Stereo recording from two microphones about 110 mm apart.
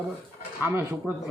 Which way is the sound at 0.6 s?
20° right (ahead or behind).